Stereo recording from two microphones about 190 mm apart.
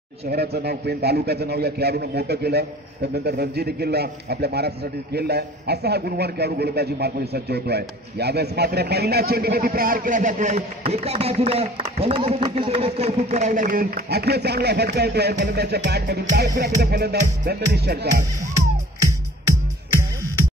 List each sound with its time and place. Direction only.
0.3 s a man's voice: 60° right (ahead or behind)
19.9 s music: 15° right (ahead or behind)